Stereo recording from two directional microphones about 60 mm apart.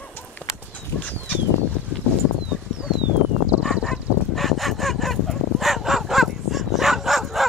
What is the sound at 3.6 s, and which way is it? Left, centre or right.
Fowl, centre.